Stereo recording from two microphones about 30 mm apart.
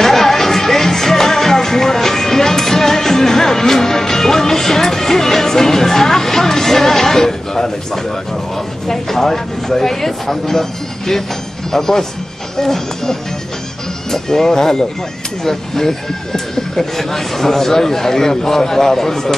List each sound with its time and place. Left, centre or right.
0.0 s music: centre
8.8 s speech: centre